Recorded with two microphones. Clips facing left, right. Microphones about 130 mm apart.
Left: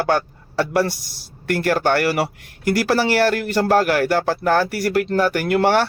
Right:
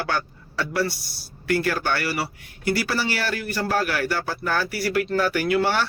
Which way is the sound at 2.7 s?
85° left.